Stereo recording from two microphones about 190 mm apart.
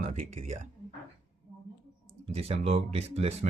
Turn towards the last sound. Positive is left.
turn(degrees=-35)  # may be behind; listen again after turning